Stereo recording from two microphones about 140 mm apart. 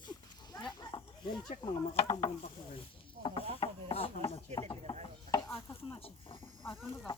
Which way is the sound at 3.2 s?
40° left (ahead or behind).